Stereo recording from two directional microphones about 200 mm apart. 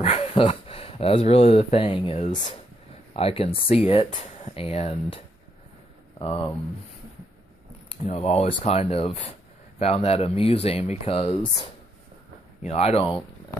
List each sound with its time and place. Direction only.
0.0 s speech: 30° left (ahead or behind)
7.9 s speech: 30° left (ahead or behind)